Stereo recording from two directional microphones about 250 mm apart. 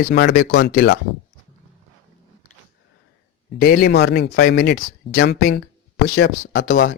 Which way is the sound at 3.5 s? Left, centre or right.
Left.